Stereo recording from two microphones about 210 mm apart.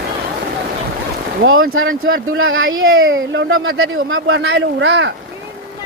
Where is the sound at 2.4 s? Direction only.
70° right (ahead or behind).